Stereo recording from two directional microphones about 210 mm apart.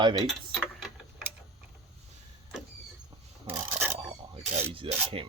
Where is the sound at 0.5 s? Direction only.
Centre (ahead or behind).